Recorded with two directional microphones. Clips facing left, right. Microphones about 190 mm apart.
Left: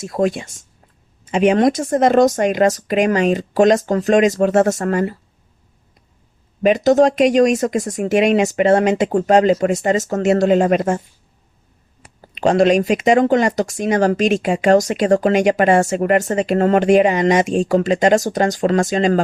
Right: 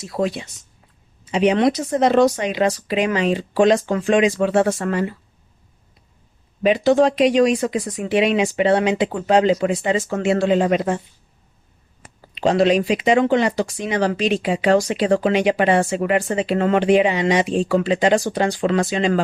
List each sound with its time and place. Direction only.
0.0 s speech: 50° left (ahead or behind)
6.6 s speech: 45° left (ahead or behind)
12.3 s speech: 50° left (ahead or behind)